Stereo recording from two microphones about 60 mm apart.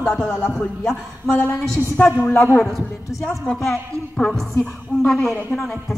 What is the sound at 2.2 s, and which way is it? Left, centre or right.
Speech, left.